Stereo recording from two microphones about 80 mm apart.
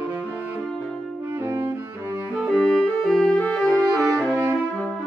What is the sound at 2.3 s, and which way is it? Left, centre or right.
Music, centre.